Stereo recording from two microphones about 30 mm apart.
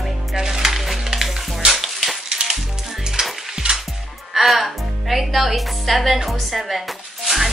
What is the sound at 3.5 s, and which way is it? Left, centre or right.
Music, right.